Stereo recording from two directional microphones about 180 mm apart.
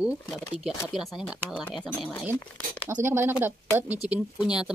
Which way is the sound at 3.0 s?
10° right (ahead or behind).